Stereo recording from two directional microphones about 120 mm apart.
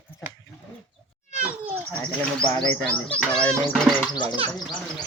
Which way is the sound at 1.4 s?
15° right (ahead or behind).